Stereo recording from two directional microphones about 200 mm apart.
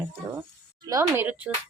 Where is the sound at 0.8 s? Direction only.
15° right (ahead or behind).